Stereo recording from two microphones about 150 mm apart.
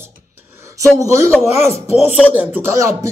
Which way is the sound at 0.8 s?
20° right (ahead or behind).